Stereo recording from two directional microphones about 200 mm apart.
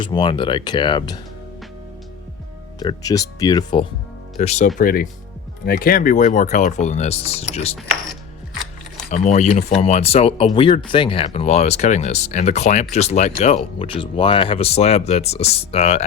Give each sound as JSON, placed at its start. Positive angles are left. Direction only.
{"t": 0.0, "sound": "speech", "side_deg": 25}
{"t": 2.7, "sound": "speech", "side_deg": 20}
{"t": 4.4, "sound": "speech", "side_deg": 35}
{"t": 4.8, "sound": "speech", "side_deg": 45}
{"t": 9.0, "sound": "speech", "side_deg": 35}